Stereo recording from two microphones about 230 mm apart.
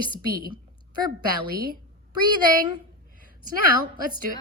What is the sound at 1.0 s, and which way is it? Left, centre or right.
Speech, centre.